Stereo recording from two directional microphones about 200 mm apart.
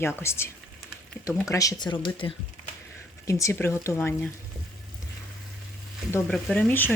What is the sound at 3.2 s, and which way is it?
Speech, 15° left (ahead or behind).